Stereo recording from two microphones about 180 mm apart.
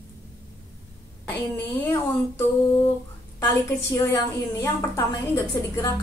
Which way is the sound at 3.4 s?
15° left (ahead or behind).